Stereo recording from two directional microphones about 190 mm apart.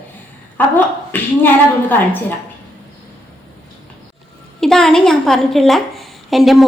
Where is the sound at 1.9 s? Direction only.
10° left (ahead or behind).